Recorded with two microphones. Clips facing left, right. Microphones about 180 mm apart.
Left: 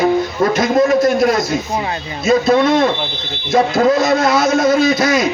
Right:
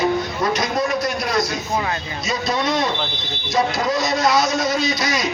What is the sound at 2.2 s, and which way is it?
A man's voice, 50° left (ahead or behind).